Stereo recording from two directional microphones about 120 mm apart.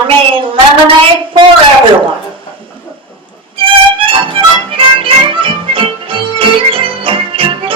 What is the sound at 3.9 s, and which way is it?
Music, 45° right (ahead or behind).